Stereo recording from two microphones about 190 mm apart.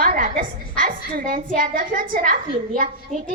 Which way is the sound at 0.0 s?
50° right (ahead or behind).